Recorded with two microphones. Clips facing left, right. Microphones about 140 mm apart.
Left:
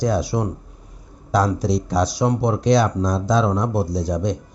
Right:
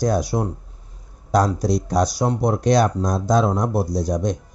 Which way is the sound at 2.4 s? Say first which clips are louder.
Right 1 dB; 45° right (ahead or behind).